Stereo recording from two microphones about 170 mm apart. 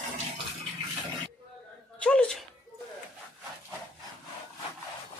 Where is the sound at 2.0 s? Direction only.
5° left (ahead or behind).